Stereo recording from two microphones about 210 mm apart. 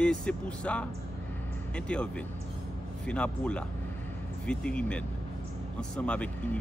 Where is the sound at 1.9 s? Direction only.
5° left (ahead or behind).